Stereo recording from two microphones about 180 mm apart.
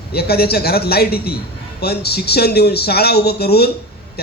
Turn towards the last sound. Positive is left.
turn(degrees=60)  # may be behind; listen again after turning